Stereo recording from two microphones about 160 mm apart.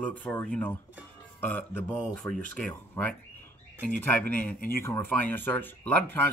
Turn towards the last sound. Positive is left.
turn(degrees=10)  # may be behind; listen again after turning